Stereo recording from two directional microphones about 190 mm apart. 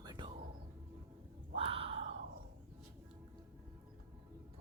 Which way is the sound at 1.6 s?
30° right (ahead or behind).